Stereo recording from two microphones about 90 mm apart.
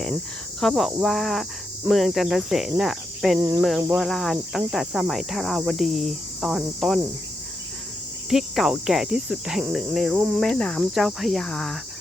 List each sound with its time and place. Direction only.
0.6 s cricket: 5° left (ahead or behind)
3.3 s cricket: 30° right (ahead or behind)
3.9 s cricket: centre (ahead or behind)
8.3 s cricket: 5° right (ahead or behind)
10.4 s cricket: 10° left (ahead or behind)
10.9 s cricket: 5° right (ahead or behind)